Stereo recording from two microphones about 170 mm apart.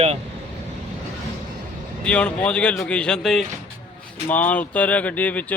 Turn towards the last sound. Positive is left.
turn(degrees=10)  # may be behind; listen again after turning